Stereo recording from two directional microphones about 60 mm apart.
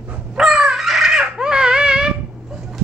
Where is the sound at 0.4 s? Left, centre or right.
Centre.